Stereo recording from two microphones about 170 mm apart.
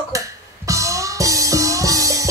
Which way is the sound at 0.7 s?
20° right (ahead or behind).